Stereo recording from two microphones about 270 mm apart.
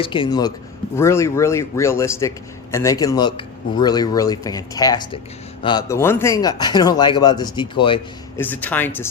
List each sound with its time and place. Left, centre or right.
0.0 s speech: centre
8.4 s speech: centre